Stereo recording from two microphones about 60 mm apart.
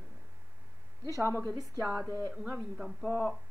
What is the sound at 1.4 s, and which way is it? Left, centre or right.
Speech, right.